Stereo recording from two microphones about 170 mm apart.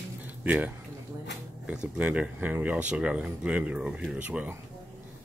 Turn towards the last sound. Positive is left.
turn(degrees=-5)  # may be behind; listen again after turning